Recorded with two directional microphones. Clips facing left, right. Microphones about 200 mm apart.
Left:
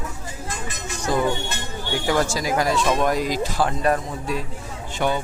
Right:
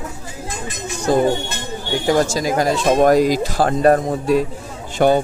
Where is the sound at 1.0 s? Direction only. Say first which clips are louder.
Right 6 dB; 25° right (ahead or behind).